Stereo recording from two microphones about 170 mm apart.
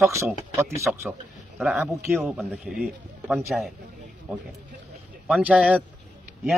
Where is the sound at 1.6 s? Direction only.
5° right (ahead or behind).